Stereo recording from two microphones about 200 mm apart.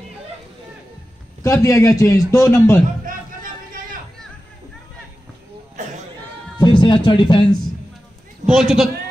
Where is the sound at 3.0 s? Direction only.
45° right (ahead or behind).